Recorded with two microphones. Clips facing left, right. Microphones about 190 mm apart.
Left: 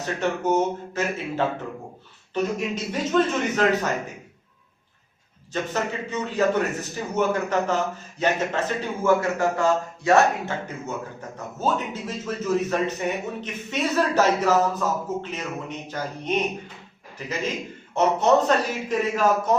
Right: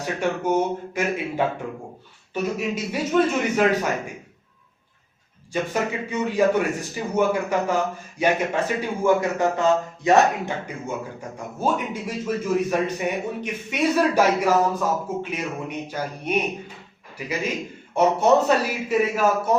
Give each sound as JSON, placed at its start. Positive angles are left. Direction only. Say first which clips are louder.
{"t": 0.0, "sound": "a man's voice", "louder": "right 1 dB", "side_deg": -10}
{"t": 5.7, "sound": "a man's voice", "louder": "right 1 dB", "side_deg": -10}